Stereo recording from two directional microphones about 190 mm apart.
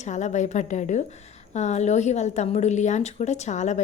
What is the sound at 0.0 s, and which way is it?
Speech, 40° left (ahead or behind).